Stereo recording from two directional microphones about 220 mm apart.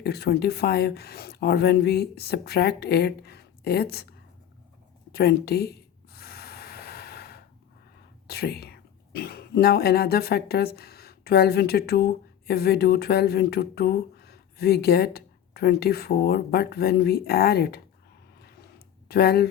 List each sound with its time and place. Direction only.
0.0 s speech: 45° left (ahead or behind)
5.1 s speech: 45° left (ahead or behind)
6.1 s snort: 45° left (ahead or behind)
8.3 s speech: 45° left (ahead or behind)
19.0 s speech: 45° left (ahead or behind)